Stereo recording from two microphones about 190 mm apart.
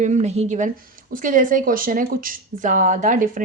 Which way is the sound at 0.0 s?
40° right (ahead or behind).